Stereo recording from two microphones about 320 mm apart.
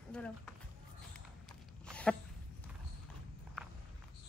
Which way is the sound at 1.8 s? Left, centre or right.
Centre.